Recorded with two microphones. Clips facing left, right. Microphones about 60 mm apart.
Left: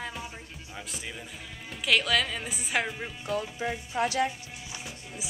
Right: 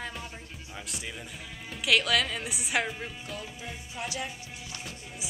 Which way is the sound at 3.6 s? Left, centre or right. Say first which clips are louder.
Left 9 dB; left.